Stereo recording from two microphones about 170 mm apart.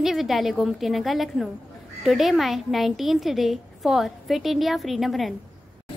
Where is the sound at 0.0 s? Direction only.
Centre (ahead or behind).